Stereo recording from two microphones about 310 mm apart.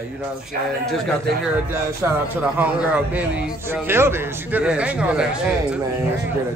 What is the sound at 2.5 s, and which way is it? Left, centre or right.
Speech, centre.